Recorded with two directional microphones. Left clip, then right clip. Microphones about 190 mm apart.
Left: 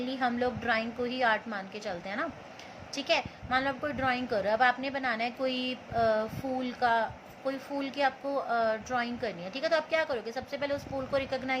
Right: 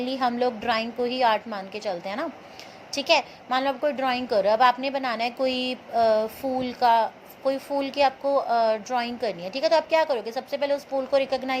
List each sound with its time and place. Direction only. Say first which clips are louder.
0.0 s a woman's voice: right 6 dB; 20° right (ahead or behind)